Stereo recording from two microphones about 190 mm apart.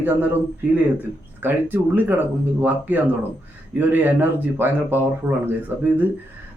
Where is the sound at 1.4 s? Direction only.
10° right (ahead or behind).